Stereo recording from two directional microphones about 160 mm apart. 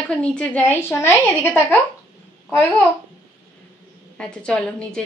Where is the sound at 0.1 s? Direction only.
5° left (ahead or behind).